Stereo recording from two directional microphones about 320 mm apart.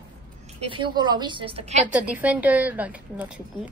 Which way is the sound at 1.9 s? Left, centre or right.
Centre.